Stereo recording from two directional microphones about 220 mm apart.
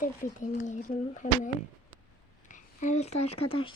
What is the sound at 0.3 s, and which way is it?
Speech, 35° left (ahead or behind).